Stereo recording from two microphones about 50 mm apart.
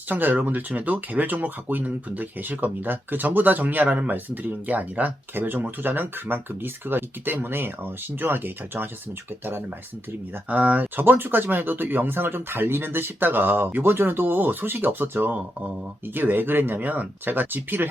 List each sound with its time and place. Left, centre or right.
0.1 s speech: right
10.5 s speech: right